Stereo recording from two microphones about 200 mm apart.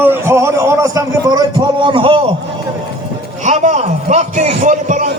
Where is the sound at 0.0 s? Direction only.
10° right (ahead or behind).